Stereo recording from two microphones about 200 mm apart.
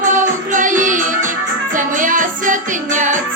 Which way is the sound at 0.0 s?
40° right (ahead or behind).